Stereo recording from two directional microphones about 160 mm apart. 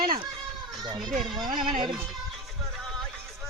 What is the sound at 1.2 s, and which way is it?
Speech, centre (ahead or behind).